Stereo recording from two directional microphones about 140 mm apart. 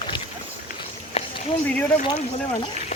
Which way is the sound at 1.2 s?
45° left (ahead or behind).